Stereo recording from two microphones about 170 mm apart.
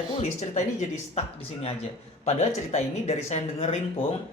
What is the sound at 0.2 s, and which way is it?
Speech, 40° left (ahead or behind).